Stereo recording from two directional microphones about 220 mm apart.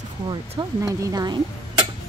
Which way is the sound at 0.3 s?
15° right (ahead or behind).